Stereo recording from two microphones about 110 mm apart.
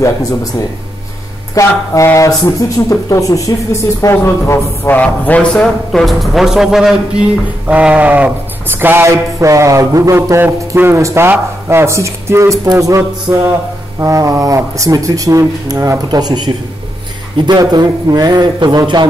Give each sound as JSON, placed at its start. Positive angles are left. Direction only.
{"t": 0.0, "sound": "speech", "side_deg": 30}
{"t": 1.5, "sound": "speech", "side_deg": 30}
{"t": 4.9, "sound": "a man's voice", "side_deg": 15}
{"t": 8.8, "sound": "speech", "side_deg": -25}